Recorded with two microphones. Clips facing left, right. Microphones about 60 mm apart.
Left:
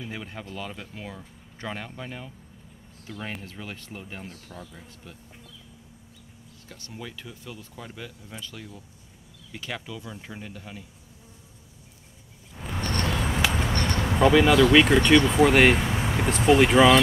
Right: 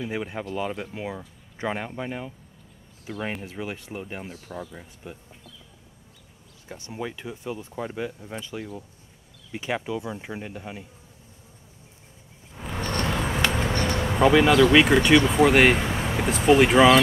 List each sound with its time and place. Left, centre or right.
0.0 s speech: centre
6.7 s speech: right
12.5 s a sound: centre
13.3 s a sound: centre
13.7 s bee: centre
14.1 s speech: centre